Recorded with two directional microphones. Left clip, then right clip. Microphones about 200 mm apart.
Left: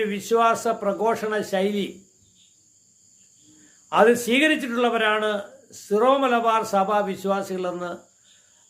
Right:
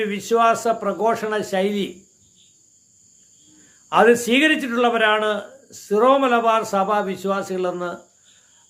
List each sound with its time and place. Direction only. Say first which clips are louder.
0.0 s a man's voice: right 2 dB; 15° right (ahead or behind)
3.8 s a man's voice: right 3 dB; 15° right (ahead or behind)